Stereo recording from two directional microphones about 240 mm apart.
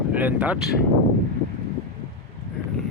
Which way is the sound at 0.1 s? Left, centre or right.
Centre.